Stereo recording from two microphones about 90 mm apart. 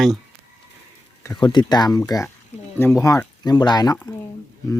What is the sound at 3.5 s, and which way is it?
Speech, 50° left (ahead or behind).